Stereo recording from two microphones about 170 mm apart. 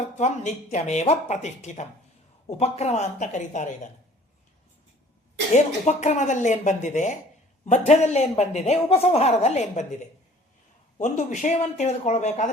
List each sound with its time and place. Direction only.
0.2 s a man's voice: 45° left (ahead or behind)
5.5 s a man's voice: 45° left (ahead or behind)